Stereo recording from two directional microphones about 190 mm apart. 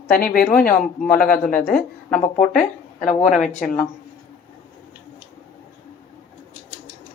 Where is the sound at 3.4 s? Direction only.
45° left (ahead or behind).